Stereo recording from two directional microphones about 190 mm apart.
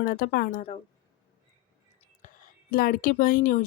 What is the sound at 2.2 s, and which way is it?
Whispering, 45° left (ahead or behind).